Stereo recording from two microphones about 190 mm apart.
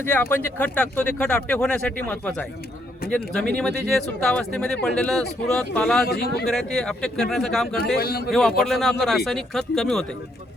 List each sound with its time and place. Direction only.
0.0 s speech: 10° left (ahead or behind)
6.1 s a man's voice: 55° left (ahead or behind)
6.5 s speech: centre (ahead or behind)
7.9 s a man's voice: 55° left (ahead or behind)
8.3 s speech: centre (ahead or behind)